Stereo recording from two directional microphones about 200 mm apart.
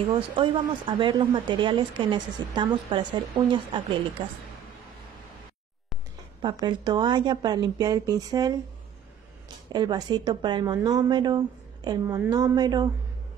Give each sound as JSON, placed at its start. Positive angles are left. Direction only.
{"t": 0.1, "sound": "speech", "side_deg": -25}
{"t": 6.6, "sound": "speech", "side_deg": -20}
{"t": 9.7, "sound": "speech", "side_deg": -20}